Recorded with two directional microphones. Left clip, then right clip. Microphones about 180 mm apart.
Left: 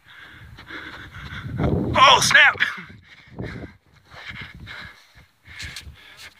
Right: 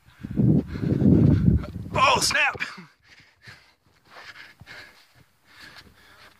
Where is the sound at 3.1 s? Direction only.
25° right (ahead or behind).